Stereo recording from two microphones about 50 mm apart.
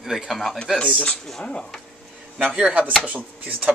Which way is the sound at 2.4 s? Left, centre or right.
Right.